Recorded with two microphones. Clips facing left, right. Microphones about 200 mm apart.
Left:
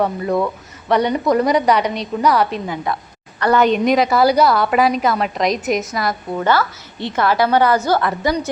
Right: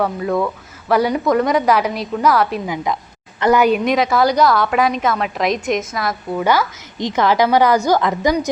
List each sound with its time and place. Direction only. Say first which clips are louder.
0.0 s a woman's voice: even; centre (ahead or behind)
2.6 s a woman's voice: right 1 dB; 15° right (ahead or behind); by 6.4 s centre (ahead or behind)
6.4 s a woman's voice: even; 15° right (ahead or behind)